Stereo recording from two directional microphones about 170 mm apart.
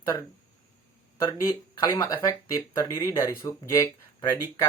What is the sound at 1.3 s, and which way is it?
Speech, 20° left (ahead or behind).